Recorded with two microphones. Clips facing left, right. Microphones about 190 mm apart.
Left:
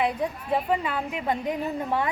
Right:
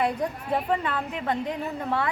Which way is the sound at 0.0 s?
5° left (ahead or behind).